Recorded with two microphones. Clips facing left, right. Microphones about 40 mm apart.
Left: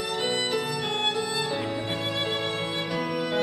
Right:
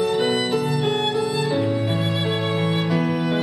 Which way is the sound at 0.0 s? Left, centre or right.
Centre.